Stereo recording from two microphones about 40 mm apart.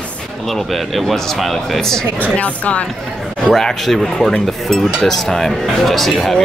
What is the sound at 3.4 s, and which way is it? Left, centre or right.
Speech, centre.